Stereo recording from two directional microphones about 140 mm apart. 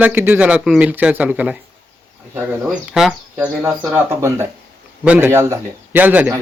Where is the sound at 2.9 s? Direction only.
5° right (ahead or behind).